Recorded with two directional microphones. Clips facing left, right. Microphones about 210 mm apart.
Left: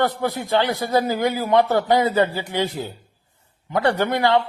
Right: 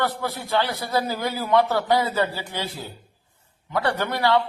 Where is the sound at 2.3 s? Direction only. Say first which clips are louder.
Left 6 dB; 15° left (ahead or behind).